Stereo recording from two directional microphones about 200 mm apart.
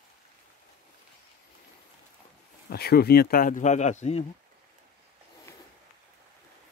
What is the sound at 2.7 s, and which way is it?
Speech, 50° left (ahead or behind).